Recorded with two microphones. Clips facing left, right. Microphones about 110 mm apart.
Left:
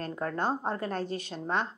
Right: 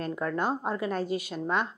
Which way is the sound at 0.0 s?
35° left (ahead or behind).